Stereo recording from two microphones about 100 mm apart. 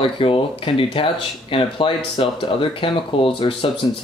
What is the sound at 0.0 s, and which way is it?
Speech, 60° left (ahead or behind).